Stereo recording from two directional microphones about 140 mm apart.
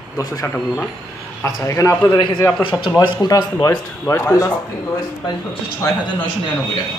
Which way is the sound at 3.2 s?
25° left (ahead or behind).